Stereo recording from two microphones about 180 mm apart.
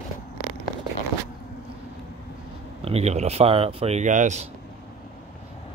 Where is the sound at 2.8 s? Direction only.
35° right (ahead or behind).